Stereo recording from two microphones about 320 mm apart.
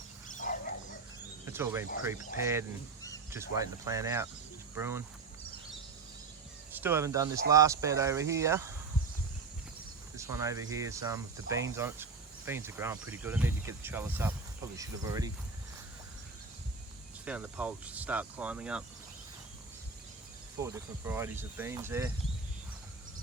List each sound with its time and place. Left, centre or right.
0.3 s dog: left
1.5 s speech: centre
6.7 s speech: centre
10.2 s speech: centre
17.2 s speech: centre
20.6 s speech: centre